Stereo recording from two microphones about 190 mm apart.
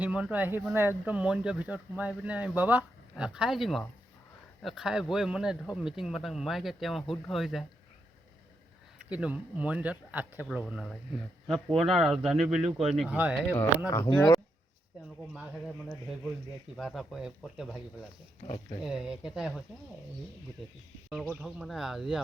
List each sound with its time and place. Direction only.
0.0 s a man's voice: 5° right (ahead or behind)
9.0 s a man's voice: 5° right (ahead or behind)
13.8 s speech: 20° left (ahead or behind)
16.7 s a man's voice: centre (ahead or behind)
18.4 s speech: 30° left (ahead or behind)
18.8 s a man's voice: 5° right (ahead or behind)
21.2 s a man's voice: 5° right (ahead or behind)